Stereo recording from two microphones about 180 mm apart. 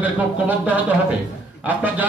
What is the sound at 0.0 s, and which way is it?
Speech, 10° right (ahead or behind).